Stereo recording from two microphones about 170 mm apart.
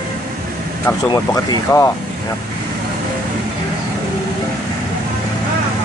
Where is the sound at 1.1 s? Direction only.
20° left (ahead or behind).